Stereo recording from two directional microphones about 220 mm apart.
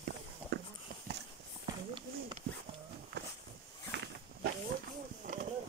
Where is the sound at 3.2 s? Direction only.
50° right (ahead or behind).